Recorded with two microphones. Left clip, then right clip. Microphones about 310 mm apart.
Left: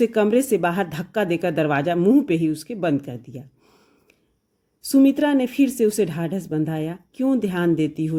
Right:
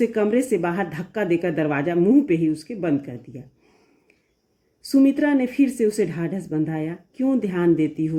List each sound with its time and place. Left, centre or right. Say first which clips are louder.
0.0 s speech: left 2 dB; left
4.9 s speech: left 1 dB; left